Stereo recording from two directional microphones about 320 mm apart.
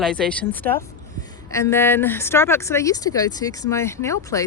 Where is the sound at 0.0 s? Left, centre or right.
Centre.